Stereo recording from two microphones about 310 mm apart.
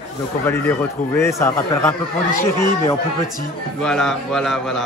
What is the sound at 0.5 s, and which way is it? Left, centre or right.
Speech, centre.